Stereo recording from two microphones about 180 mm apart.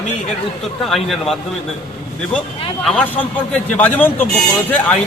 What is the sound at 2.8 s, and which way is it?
A man's voice, 5° left (ahead or behind).